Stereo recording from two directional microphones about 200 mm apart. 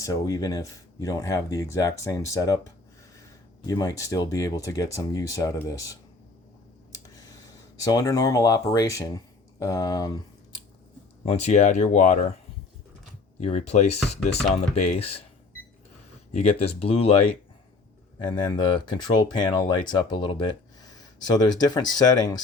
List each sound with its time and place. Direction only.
0.0 s speech: 15° left (ahead or behind)
3.7 s speech: 15° left (ahead or behind)
6.9 s tick: 20° left (ahead or behind)
7.8 s speech: 15° left (ahead or behind)
11.3 s speech: 35° left (ahead or behind)
13.4 s speech: 35° left (ahead or behind)
16.3 s speech: 30° left (ahead or behind)
18.3 s speech: 20° left (ahead or behind)